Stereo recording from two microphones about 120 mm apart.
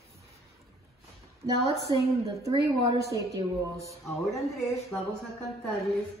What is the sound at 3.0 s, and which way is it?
Speech, 25° right (ahead or behind).